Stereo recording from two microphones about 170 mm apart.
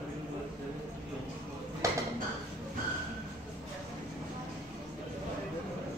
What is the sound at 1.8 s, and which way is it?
Dishes, 20° right (ahead or behind).